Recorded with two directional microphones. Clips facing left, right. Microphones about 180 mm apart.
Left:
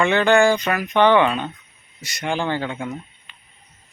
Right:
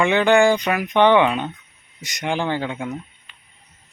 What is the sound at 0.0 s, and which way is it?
Speech, 15° right (ahead or behind).